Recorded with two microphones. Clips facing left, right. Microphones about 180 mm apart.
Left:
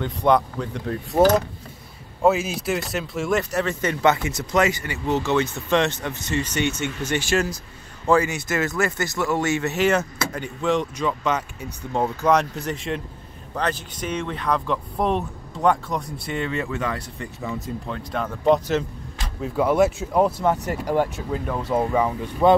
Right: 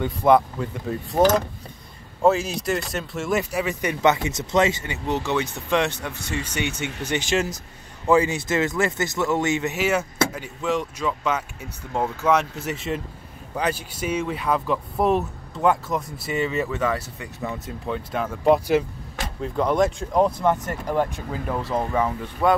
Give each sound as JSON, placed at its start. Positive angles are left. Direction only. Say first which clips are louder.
{"t": 0.0, "sound": "speech", "louder": "right 2 dB", "side_deg": -5}
{"t": 2.2, "sound": "speech", "louder": "even", "side_deg": 0}
{"t": 9.8, "sound": "speech", "louder": "left 1 dB", "side_deg": -5}
{"t": 19.4, "sound": "speech", "louder": "left 2 dB", "side_deg": 5}
{"t": 21.3, "sound": "speech", "louder": "left 2 dB", "side_deg": 0}
{"t": 21.7, "sound": "speech", "louder": "left 3 dB", "side_deg": 10}